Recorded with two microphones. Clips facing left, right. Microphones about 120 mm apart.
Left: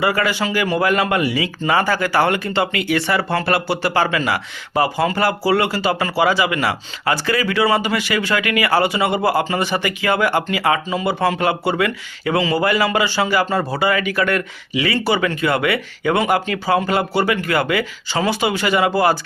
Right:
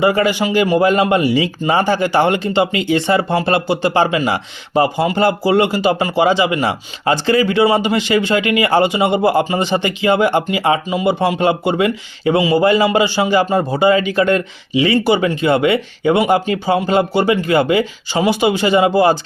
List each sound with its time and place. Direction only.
0.0 s speech: 20° right (ahead or behind)